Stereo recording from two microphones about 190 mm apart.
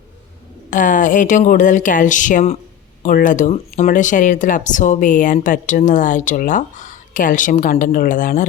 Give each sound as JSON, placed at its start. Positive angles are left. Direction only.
{"t": 0.7, "sound": "speech", "side_deg": 45}